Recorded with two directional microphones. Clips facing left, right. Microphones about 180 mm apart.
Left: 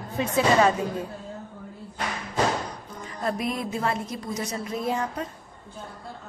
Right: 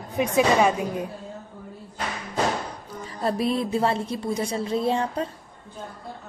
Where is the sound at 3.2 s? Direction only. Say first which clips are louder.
Right 4 dB; 30° right (ahead or behind).